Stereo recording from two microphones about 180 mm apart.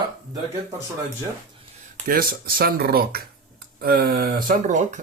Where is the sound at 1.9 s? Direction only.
50° right (ahead or behind).